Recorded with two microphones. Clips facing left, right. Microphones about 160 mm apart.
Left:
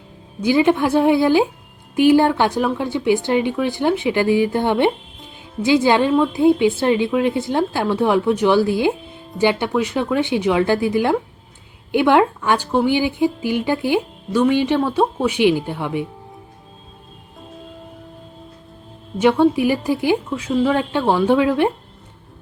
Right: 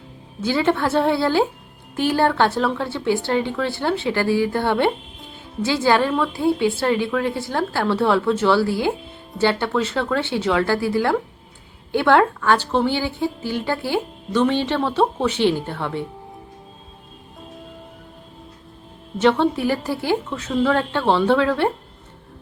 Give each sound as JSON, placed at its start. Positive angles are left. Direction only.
{"t": 0.4, "sound": "a woman's voice", "side_deg": 15}
{"t": 19.2, "sound": "a woman's voice", "side_deg": 10}